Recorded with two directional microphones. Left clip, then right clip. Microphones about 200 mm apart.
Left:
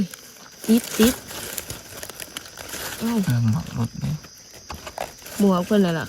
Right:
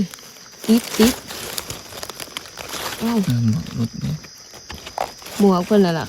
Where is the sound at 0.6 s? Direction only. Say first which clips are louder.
Right 3 dB; 45° right (ahead or behind).